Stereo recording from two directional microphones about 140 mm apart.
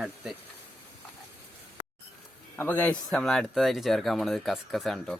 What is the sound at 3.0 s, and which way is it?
Speech, centre (ahead or behind).